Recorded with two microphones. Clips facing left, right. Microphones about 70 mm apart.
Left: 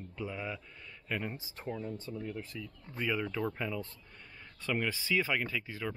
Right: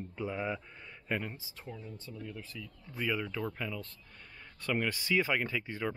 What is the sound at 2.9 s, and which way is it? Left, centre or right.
Speech, centre.